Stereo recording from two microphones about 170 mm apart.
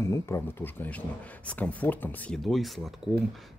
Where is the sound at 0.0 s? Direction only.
15° left (ahead or behind); by 2.7 s centre (ahead or behind).